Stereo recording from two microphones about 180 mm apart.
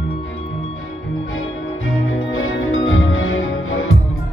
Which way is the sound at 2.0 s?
90° left.